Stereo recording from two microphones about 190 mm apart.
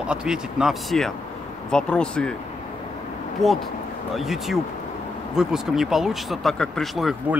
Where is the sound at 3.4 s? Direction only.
Centre (ahead or behind).